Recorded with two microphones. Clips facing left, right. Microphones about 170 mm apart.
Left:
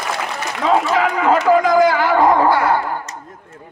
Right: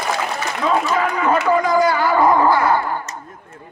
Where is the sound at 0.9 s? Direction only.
80° left.